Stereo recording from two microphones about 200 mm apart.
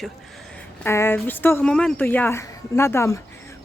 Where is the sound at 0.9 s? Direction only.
10° left (ahead or behind).